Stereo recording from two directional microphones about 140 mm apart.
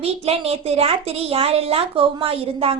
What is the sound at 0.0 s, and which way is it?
A woman's voice, 45° right (ahead or behind).